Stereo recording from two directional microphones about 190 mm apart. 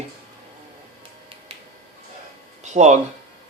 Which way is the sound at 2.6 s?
35° right (ahead or behind).